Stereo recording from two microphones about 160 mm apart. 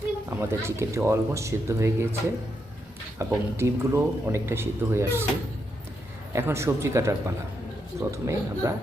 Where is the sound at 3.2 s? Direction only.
15° right (ahead or behind).